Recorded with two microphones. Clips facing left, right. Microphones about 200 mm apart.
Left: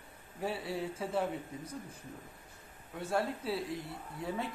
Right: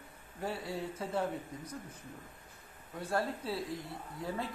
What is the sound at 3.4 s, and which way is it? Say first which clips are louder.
Speech: left 1 dB; 25° left (ahead or behind).